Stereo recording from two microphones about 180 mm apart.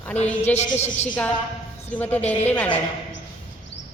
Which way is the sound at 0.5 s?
40° left (ahead or behind).